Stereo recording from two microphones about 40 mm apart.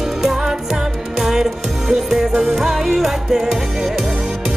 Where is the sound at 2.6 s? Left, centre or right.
Centre.